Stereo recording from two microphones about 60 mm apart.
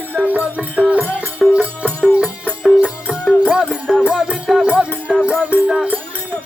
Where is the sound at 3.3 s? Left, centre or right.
Centre.